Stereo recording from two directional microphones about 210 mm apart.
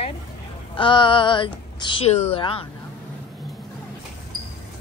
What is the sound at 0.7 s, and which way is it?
A woman's voice, 25° left (ahead or behind).